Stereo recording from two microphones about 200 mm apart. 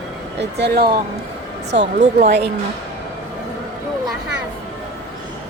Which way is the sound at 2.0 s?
35° right (ahead or behind).